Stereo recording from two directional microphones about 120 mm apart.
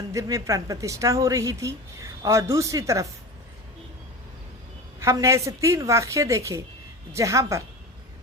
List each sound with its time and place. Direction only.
0.1 s a woman's voice: 25° right (ahead or behind)
4.9 s a woman's voice: 25° right (ahead or behind)